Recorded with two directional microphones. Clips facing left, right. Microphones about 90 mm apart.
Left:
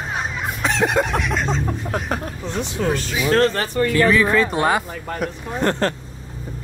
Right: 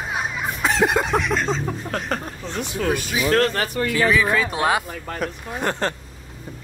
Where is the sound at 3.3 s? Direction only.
35° left (ahead or behind).